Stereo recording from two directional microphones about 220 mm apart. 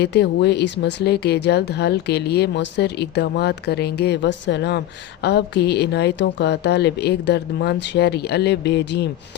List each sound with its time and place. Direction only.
0.0 s a woman's voice: 50° left (ahead or behind)